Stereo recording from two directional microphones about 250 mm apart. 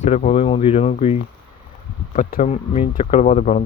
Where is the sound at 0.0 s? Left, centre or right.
Left.